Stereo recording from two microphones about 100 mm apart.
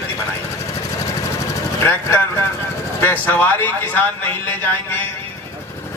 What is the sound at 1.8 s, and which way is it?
A man's voice, 20° left (ahead or behind).